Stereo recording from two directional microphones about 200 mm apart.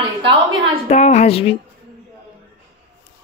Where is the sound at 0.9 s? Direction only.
35° left (ahead or behind).